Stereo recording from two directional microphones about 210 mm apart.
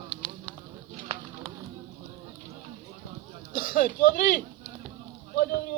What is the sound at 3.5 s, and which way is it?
Speech, 40° left (ahead or behind).